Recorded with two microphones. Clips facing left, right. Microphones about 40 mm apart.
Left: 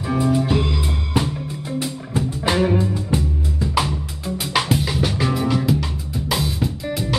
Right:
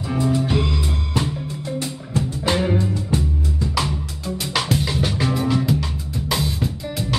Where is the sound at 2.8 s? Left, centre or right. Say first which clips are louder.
Left 1 dB; centre.